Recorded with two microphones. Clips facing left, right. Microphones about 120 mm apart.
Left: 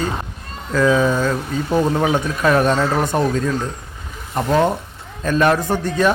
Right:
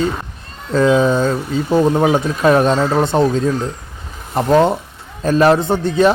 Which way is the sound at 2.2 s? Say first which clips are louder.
Right 3 dB; 30° right (ahead or behind).